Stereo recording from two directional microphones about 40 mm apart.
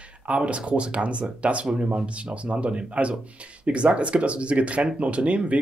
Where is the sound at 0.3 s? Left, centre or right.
Right.